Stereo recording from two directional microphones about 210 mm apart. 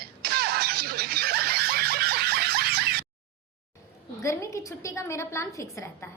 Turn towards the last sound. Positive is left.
turn(degrees=15)  # may be behind; listen again after turning